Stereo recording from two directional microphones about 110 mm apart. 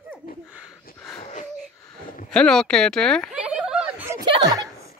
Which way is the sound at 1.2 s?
90° left.